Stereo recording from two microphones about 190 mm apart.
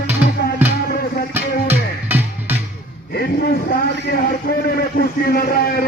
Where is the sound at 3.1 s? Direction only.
55° left (ahead or behind).